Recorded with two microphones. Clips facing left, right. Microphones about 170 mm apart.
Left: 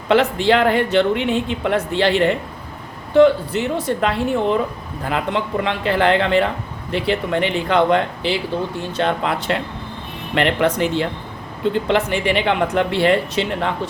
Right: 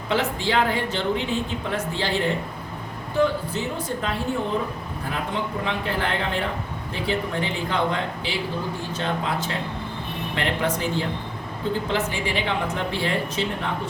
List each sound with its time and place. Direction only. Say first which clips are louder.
0.1 s a woman's voice: left 8 dB; 70° left (ahead or behind)